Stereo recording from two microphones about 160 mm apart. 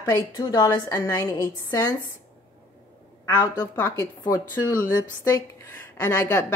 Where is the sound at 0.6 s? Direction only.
20° left (ahead or behind).